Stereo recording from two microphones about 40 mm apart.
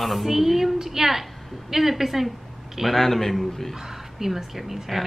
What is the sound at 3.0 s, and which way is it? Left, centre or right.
Mantra, centre.